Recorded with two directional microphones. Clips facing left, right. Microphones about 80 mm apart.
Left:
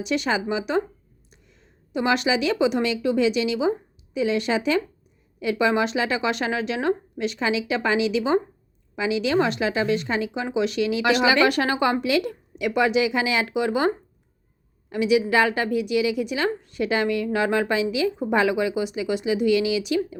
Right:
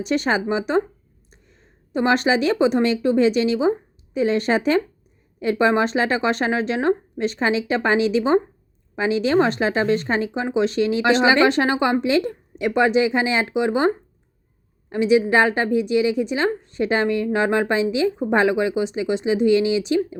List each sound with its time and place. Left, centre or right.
0.0 s a woman's voice: right